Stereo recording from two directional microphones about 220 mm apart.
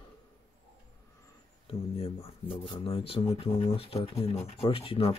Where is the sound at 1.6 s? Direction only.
25° left (ahead or behind).